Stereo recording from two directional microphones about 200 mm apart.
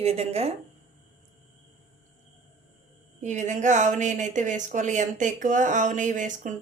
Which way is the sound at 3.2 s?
35° right (ahead or behind).